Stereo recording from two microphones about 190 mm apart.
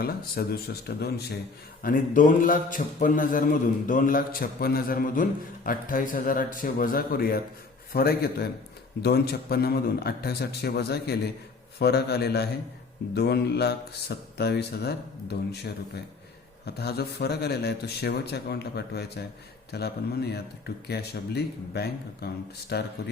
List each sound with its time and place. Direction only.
0.0 s speech: 50° left (ahead or behind)
1.8 s a man's voice: 45° left (ahead or behind)